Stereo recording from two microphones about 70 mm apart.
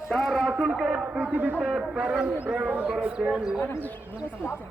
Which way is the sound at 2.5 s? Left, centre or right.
Centre.